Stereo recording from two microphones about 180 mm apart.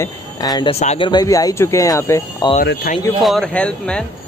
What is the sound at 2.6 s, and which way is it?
Speech, 55° left (ahead or behind).